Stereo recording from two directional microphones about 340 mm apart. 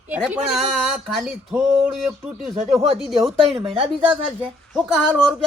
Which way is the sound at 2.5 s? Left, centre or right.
Centre.